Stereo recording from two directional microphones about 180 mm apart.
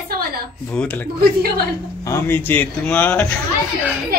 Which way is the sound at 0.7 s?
10° left (ahead or behind).